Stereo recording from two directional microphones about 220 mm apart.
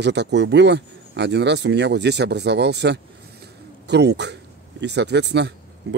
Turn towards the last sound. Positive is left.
turn(degrees=-50)  # may be behind; listen again after turning